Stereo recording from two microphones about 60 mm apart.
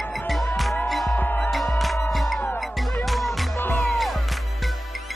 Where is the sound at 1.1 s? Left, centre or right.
Left.